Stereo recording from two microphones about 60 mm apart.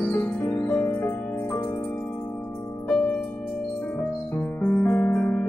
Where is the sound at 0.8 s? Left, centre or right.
Left.